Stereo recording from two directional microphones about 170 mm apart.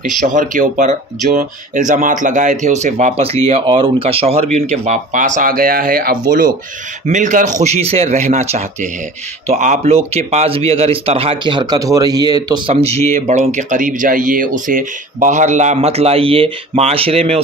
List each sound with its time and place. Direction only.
0.0 s speech: 50° right (ahead or behind)
7.1 s speech: 45° right (ahead or behind)